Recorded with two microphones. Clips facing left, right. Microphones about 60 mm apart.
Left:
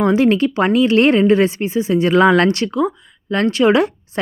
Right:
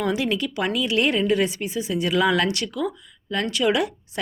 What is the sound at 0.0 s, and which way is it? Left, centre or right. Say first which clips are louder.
Speech: left 10 dB; left.